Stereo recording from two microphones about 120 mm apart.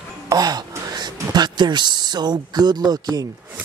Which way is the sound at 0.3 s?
30° right (ahead or behind).